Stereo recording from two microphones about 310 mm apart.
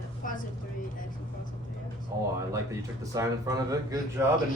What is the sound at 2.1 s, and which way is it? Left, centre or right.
A man's voice, centre.